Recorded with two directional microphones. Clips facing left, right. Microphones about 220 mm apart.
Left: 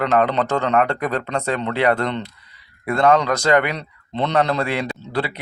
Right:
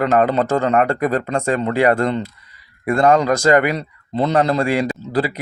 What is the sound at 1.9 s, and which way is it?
Speech, 5° right (ahead or behind).